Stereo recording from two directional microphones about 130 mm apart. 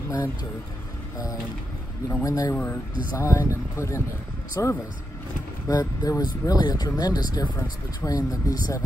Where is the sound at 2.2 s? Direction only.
25° left (ahead or behind).